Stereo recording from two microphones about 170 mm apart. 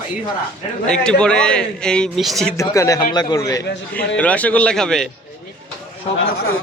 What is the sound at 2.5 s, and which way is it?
Speech, 20° left (ahead or behind).